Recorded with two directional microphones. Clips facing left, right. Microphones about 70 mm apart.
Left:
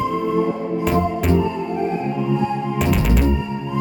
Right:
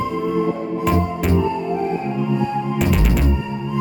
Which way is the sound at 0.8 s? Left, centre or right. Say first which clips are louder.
Even; centre.